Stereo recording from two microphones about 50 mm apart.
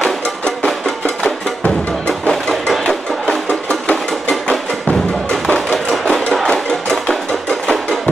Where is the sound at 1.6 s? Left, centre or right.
Left.